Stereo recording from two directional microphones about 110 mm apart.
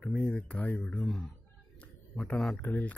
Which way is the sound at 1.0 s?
Centre (ahead or behind).